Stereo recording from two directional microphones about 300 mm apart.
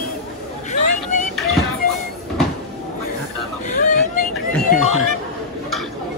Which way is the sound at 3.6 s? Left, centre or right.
Left.